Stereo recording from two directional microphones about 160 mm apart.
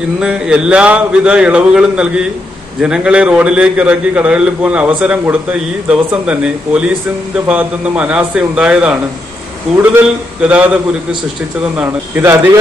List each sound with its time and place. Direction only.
0.2 s a man's voice: 5° right (ahead or behind)